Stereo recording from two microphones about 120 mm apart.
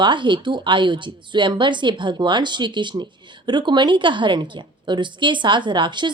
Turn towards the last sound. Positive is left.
turn(degrees=-40)  # may be behind; listen again after turning